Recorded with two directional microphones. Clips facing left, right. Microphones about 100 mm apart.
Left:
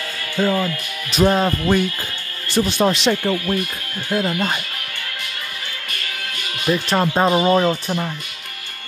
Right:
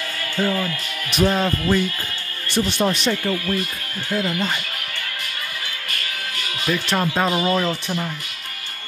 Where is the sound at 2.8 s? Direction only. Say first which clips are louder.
Left 4 dB; 90° left.